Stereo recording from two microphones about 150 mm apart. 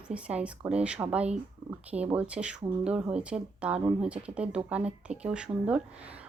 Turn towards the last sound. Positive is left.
turn(degrees=-10)  # may be behind; listen again after turning